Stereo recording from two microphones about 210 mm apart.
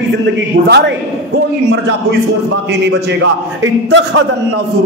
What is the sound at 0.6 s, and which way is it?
Speech, 55° right (ahead or behind).